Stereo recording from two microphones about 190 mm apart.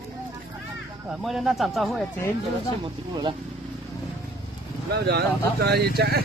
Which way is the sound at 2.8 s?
25° right (ahead or behind).